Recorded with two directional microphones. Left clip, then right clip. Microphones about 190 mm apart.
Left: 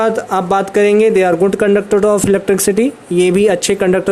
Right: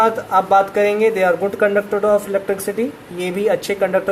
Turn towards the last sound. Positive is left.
turn(degrees=50)  # may be behind; listen again after turning